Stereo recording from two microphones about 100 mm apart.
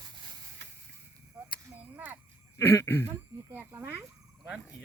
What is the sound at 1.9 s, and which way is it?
Speech, 20° right (ahead or behind).